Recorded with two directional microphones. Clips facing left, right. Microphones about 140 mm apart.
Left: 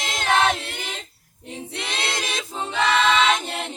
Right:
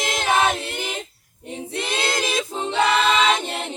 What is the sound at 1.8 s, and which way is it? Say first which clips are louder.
A capella: right 5 dB; centre (ahead or behind).